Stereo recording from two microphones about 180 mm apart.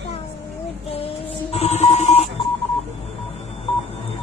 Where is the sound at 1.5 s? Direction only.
35° left (ahead or behind).